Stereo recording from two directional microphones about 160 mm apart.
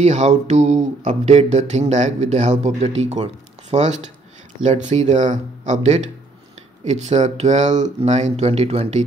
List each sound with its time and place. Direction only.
0.0 s speech: 45° right (ahead or behind)